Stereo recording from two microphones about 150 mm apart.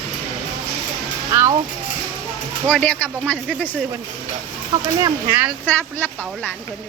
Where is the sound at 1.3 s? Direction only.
20° right (ahead or behind).